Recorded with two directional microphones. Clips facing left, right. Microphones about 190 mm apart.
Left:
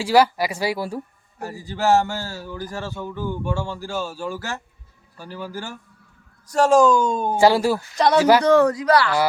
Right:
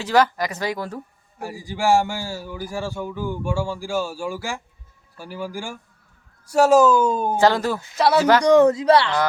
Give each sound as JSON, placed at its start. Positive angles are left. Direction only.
{"t": 0.0, "sound": "speech", "side_deg": 10}
{"t": 1.4, "sound": "speech", "side_deg": -10}
{"t": 7.3, "sound": "speech", "side_deg": 10}
{"t": 7.9, "sound": "speech", "side_deg": -5}
{"t": 8.2, "sound": "speech", "side_deg": 10}
{"t": 8.4, "sound": "speech", "side_deg": -20}